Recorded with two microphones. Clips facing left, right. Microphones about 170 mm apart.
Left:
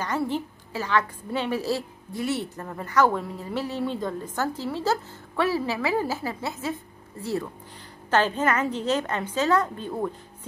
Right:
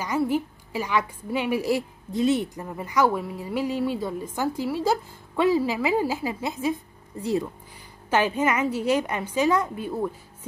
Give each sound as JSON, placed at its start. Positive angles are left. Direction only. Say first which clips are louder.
{"t": 0.0, "sound": "a woman's voice", "louder": "right 3 dB", "side_deg": -10}